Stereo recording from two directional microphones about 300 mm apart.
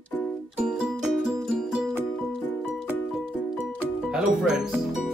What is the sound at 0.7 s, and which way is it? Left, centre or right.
Music, centre.